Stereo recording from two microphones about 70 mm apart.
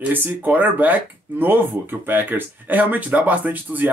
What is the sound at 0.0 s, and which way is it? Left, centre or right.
Speech, right.